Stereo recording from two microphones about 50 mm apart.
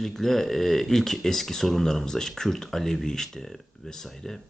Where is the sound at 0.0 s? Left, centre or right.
Centre.